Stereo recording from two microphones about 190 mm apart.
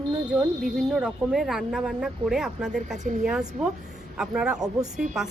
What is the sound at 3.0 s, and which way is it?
Speech, 40° right (ahead or behind).